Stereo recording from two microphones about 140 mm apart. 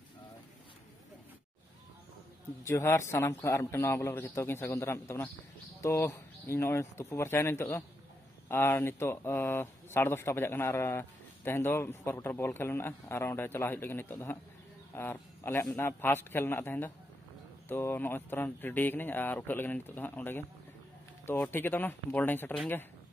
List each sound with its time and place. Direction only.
2.6 s a man's voice: 20° left (ahead or behind)